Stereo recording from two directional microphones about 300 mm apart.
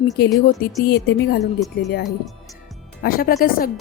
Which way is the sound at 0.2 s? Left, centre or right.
Left.